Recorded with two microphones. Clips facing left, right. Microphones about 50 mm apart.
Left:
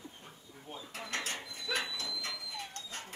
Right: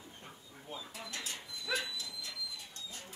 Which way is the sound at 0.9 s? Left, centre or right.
Left.